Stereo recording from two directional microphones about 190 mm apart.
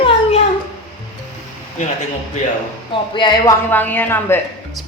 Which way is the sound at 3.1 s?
25° left (ahead or behind).